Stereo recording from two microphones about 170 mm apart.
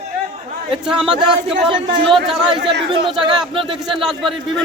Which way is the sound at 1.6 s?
30° right (ahead or behind).